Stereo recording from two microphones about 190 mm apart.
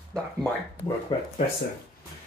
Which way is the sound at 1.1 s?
25° left (ahead or behind).